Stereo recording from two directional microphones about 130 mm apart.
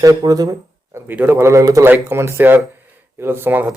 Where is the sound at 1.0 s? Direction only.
15° right (ahead or behind).